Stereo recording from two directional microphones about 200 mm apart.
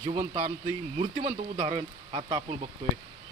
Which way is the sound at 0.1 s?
25° right (ahead or behind).